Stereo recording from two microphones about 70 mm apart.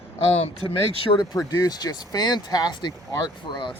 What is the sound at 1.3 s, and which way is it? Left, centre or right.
Speech, left.